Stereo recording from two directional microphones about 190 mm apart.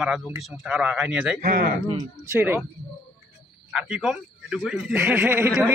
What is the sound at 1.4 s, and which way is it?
Speech, 40° right (ahead or behind).